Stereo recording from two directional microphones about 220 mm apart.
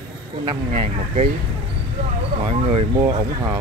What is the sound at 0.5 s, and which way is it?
Speech, 25° right (ahead or behind).